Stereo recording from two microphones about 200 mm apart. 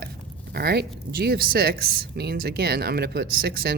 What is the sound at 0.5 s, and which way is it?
Speech, 55° right (ahead or behind).